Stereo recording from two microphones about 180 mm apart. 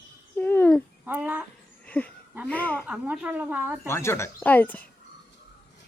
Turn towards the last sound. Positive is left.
turn(degrees=10)  # may be behind; listen again after turning